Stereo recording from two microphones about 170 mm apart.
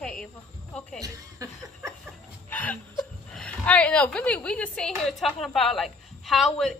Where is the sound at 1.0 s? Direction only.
20° right (ahead or behind).